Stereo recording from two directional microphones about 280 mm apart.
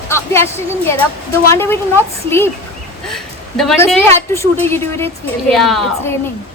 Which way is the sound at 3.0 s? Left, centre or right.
Centre.